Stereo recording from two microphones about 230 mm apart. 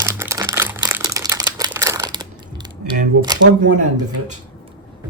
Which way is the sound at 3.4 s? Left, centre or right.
Right.